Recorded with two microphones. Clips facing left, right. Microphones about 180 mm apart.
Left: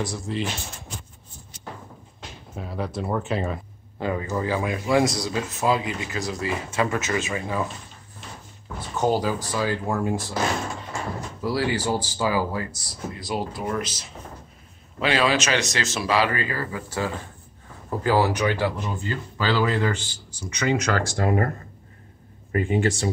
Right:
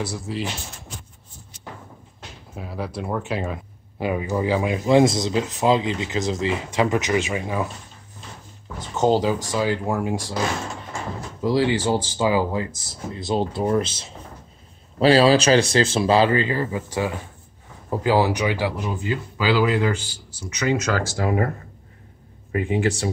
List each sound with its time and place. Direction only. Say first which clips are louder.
0.3 s speech: left 1 dB; 5° right (ahead or behind)
2.5 s speech: even; centre (ahead or behind)
4.0 s speech: right 3 dB; 15° right (ahead or behind)
8.9 s speech: right 4 dB; 20° right (ahead or behind)
11.4 s speech: right 4 dB; 20° right (ahead or behind)
22.5 s speech: even; 5° right (ahead or behind)